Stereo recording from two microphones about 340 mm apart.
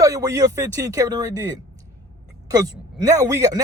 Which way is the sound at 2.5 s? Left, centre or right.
Centre.